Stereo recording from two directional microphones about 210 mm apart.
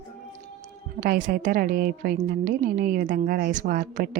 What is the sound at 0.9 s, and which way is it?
A woman's voice, 45° right (ahead or behind).